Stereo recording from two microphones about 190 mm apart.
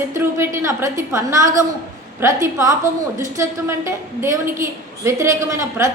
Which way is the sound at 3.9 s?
15° right (ahead or behind).